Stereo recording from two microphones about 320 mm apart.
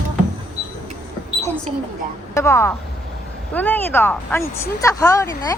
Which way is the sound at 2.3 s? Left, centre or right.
Centre.